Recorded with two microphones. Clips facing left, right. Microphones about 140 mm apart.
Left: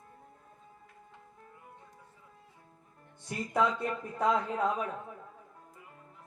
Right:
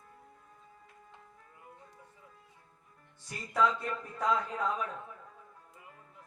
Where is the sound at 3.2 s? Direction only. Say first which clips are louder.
Left 1 dB; 25° left (ahead or behind).